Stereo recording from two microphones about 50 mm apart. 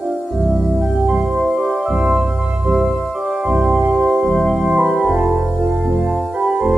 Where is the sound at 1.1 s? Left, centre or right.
Centre.